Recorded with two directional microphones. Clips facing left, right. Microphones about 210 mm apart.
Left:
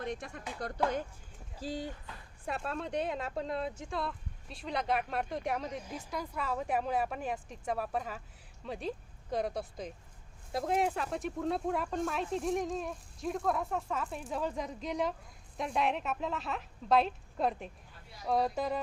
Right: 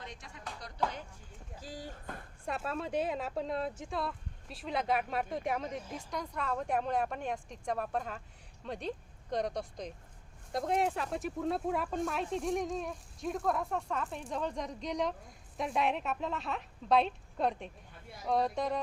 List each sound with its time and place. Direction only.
0.0 s music: 55° left (ahead or behind)
1.6 s speech: 25° left (ahead or behind)
1.9 s speech: 50° right (ahead or behind)
2.4 s speech: centre (ahead or behind)